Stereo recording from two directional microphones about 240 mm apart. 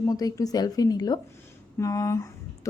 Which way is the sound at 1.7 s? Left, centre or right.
Centre.